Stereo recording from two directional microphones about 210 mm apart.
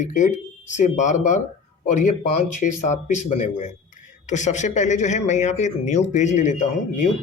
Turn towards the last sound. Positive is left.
turn(degrees=35)  # may be behind; listen again after turning